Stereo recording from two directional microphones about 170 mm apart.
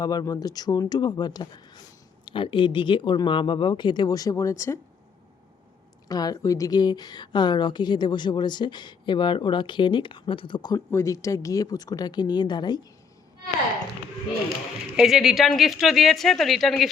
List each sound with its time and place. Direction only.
0.0 s a woman's voice: 25° left (ahead or behind)
6.1 s a woman's voice: 20° left (ahead or behind)
14.9 s speech: centre (ahead or behind)